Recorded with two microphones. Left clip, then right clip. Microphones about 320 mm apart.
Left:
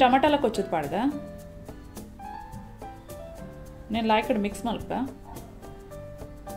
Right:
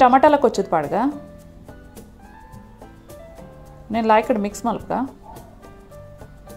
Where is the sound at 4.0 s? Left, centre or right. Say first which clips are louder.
Right 7 dB; centre.